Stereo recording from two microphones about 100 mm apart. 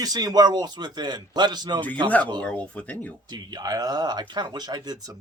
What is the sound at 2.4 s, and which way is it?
Speech, 10° left (ahead or behind).